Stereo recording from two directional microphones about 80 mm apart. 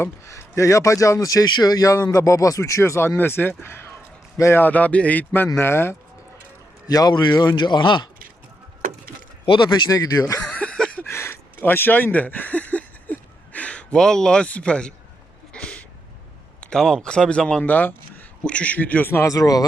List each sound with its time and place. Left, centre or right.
0.0 s a man's voice: left
4.6 s speech: centre
6.8 s a man's voice: left
9.5 s speech: left
9.9 s speech: left
10.4 s a sound: centre
11.1 s a sound: left; by 15.7 s centre
16.6 s speech: centre
19.3 s speech: left